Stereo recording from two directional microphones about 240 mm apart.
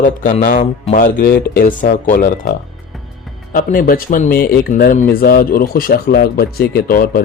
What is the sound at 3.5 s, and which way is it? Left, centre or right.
Speech, left.